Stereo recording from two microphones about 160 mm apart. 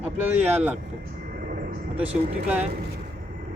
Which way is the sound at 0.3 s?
10° right (ahead or behind).